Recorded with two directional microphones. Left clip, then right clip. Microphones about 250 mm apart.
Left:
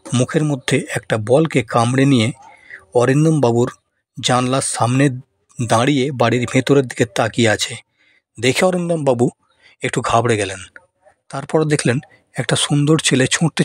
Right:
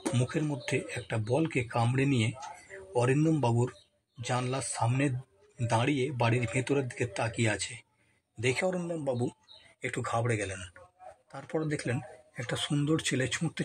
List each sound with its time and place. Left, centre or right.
0.1 s speech: left